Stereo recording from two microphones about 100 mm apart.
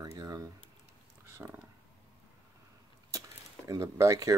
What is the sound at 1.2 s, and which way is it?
Speech, 20° right (ahead or behind).